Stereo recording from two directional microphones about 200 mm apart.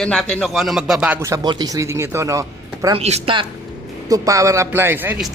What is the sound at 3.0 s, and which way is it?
Speech, 30° right (ahead or behind).